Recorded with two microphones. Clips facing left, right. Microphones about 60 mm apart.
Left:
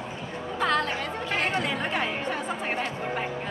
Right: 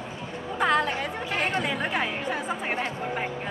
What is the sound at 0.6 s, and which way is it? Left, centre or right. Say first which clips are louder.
Chatter: right 2 dB; centre.